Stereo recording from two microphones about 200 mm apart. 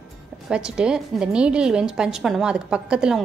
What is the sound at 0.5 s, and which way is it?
A woman's voice, 5° right (ahead or behind).